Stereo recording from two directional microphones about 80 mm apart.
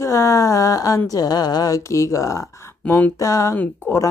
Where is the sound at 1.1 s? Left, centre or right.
Left.